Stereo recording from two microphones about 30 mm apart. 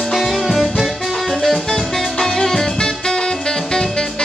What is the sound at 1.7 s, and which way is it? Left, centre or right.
Music, centre.